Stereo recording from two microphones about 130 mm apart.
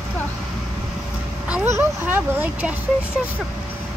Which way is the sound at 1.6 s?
15° right (ahead or behind).